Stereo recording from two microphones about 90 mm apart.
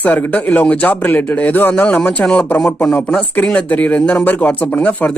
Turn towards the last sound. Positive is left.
turn(degrees=15)  # may be behind; listen again after turning